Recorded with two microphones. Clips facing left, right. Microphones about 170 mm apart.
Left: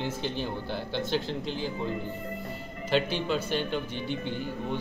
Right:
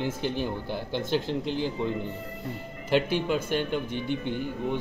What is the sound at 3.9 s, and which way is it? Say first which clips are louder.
Speech: right 3 dB; 55° right (ahead or behind).